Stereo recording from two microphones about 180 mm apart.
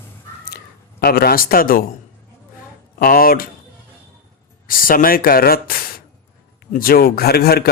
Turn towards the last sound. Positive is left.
turn(degrees=60)  # may be behind; listen again after turning